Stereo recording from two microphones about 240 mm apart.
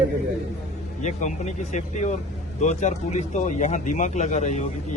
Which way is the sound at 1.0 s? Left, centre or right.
Left.